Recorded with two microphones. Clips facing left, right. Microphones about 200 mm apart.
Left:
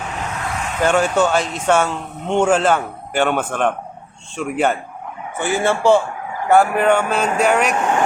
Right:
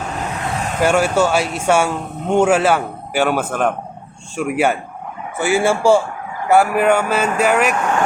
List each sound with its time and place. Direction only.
0.4 s vehicle: 30° right (ahead or behind)
0.8 s speech: 10° right (ahead or behind)